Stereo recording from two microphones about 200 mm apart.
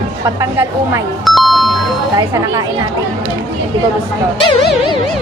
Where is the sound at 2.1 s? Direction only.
15° right (ahead or behind).